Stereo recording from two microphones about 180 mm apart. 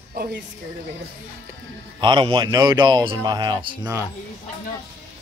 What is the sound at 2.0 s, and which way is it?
Speech, 25° right (ahead or behind).